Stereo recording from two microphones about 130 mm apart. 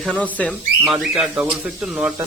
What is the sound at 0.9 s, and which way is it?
Speech, 5° right (ahead or behind).